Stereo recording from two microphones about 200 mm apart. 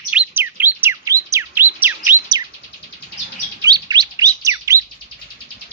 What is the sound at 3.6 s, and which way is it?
Chirp, 20° right (ahead or behind).